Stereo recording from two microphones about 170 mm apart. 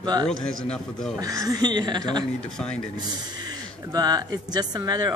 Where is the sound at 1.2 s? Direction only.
20° right (ahead or behind).